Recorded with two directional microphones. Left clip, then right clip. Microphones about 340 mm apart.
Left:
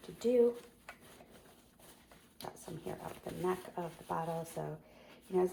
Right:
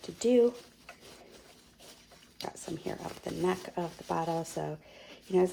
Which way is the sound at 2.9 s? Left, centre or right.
Right.